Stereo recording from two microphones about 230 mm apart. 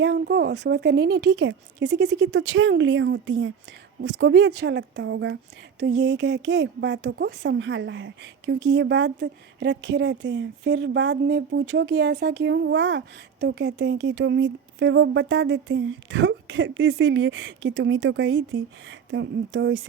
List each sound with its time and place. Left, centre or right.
0.0 s speech: right